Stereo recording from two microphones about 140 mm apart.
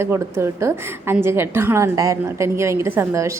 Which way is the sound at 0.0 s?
20° right (ahead or behind).